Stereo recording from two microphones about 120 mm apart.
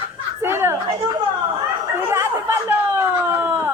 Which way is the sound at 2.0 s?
20° right (ahead or behind).